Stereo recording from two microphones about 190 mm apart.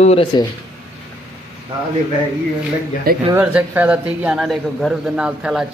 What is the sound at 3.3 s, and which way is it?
A man's voice, 10° right (ahead or behind).